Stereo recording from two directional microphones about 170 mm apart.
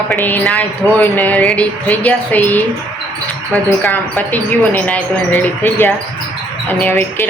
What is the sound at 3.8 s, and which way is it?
Speech, 10° left (ahead or behind).